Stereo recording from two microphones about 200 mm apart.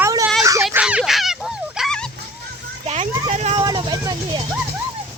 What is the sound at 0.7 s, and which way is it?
Dog, 5° right (ahead or behind).